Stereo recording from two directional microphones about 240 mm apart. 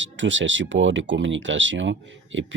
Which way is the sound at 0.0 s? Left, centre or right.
Right.